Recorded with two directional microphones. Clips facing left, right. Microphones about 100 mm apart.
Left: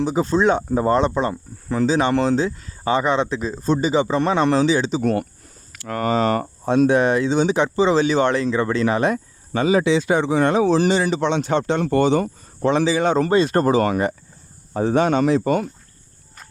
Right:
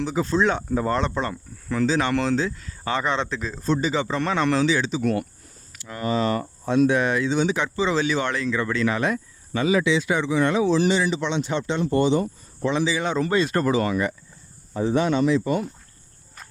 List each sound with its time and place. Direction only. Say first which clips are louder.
0.0 s speech: left 4 dB; 20° left (ahead or behind)
5.7 s speech: left 4 dB; 60° left (ahead or behind)
6.7 s speech: left 4 dB; 35° left (ahead or behind); by 12.7 s 55° left (ahead or behind)
12.7 s speech: left 6 dB; 40° left (ahead or behind)
13.3 s speech: left 3 dB; 30° left (ahead or behind); by 14.2 s 45° left (ahead or behind)
14.7 s speech: left 4 dB; 60° left (ahead or behind)